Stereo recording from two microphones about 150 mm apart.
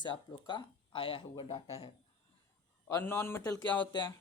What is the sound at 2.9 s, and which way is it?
Speech, 15° left (ahead or behind).